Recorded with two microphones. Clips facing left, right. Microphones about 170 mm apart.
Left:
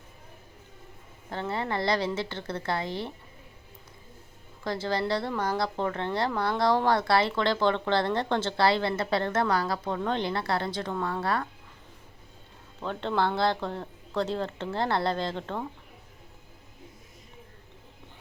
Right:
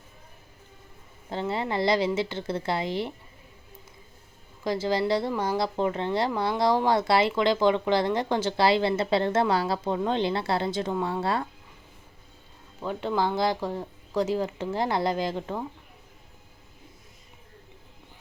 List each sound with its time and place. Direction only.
1.3 s speech: 20° right (ahead or behind)
4.6 s speech: 20° right (ahead or behind)
12.8 s speech: 10° right (ahead or behind)